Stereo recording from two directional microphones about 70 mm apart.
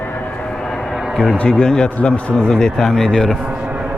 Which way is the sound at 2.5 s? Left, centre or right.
Centre.